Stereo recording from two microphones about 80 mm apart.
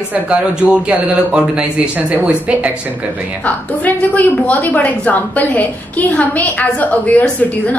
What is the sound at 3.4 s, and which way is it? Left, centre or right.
A woman's voice, centre.